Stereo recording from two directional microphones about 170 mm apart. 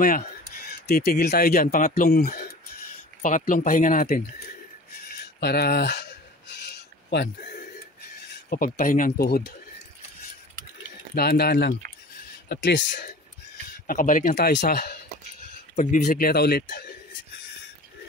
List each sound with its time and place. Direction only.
0.8 s speech: 60° left (ahead or behind)
3.2 s speech: 50° left (ahead or behind)
5.4 s a sound: 70° left (ahead or behind)
8.5 s speech: 55° left (ahead or behind)
11.1 s speech: 65° left (ahead or behind)
12.4 s speech: 90° left
13.8 s speech: 50° left (ahead or behind)
14.5 s speech: 75° left (ahead or behind)
15.7 s speech: 45° left (ahead or behind); by 16.8 s 60° left (ahead or behind)